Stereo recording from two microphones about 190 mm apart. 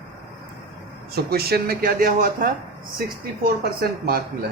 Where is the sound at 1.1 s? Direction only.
55° right (ahead or behind).